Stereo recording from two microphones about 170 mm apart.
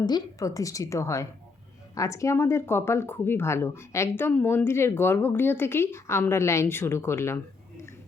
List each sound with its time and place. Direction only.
0.0 s a woman's voice: 20° left (ahead or behind)